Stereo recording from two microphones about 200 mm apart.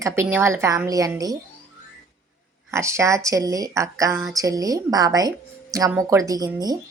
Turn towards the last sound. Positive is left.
turn(degrees=-20)  # may be behind; listen again after turning